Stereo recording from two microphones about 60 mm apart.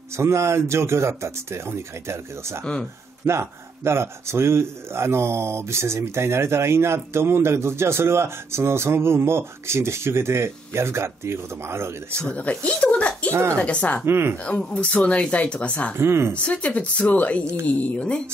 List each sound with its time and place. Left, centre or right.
0.2 s speech: right
2.6 s speech: centre
3.3 s speech: right
12.3 s speech: left
13.3 s speech: right
13.6 s speech: left
14.0 s speech: right
14.4 s speech: centre
16.0 s speech: right
16.4 s speech: left